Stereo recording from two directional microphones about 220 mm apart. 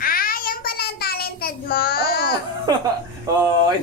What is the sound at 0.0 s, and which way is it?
Child singing, 40° left (ahead or behind).